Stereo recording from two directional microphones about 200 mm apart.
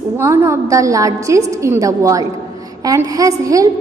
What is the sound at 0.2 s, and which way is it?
A woman's voice, 15° right (ahead or behind).